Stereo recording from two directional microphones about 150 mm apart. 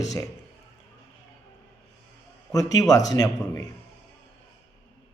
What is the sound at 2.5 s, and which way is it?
A man's voice, 25° left (ahead or behind).